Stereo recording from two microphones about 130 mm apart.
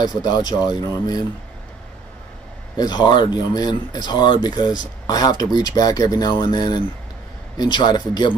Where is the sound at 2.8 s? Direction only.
35° left (ahead or behind).